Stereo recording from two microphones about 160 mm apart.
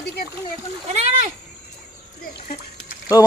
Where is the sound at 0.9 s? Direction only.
45° right (ahead or behind).